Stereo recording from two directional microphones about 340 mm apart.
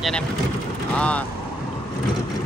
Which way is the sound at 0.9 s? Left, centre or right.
Centre.